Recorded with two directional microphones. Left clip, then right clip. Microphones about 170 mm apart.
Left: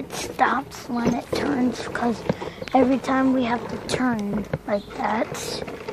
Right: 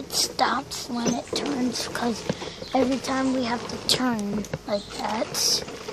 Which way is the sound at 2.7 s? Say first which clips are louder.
Left 4 dB; 20° left (ahead or behind).